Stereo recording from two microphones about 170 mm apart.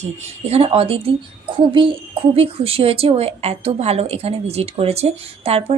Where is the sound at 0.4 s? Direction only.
35° right (ahead or behind).